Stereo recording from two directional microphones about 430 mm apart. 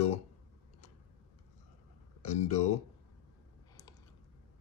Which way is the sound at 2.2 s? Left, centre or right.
Centre.